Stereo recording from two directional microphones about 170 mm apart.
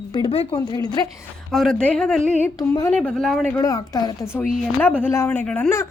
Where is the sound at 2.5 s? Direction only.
20° left (ahead or behind).